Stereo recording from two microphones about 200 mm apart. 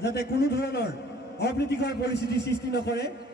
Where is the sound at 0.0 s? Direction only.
55° left (ahead or behind).